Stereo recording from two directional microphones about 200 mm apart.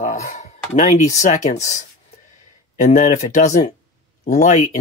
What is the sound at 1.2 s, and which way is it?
Speech, 35° left (ahead or behind).